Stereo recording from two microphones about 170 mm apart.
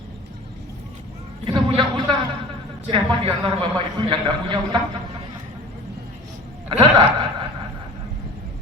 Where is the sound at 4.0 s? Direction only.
25° right (ahead or behind).